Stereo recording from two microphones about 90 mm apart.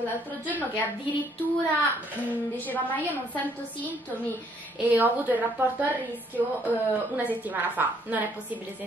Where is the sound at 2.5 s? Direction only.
20° left (ahead or behind).